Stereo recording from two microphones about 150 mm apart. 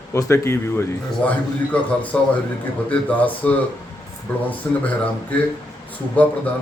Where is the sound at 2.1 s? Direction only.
10° left (ahead or behind).